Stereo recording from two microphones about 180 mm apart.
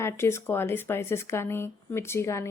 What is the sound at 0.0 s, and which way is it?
A woman's voice, 15° left (ahead or behind).